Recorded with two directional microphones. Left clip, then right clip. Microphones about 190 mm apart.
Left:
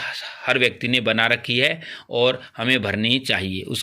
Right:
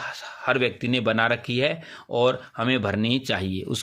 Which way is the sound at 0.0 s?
40° right (ahead or behind).